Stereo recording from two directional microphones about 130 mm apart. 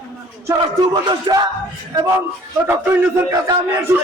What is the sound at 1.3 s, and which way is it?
Music, 35° right (ahead or behind).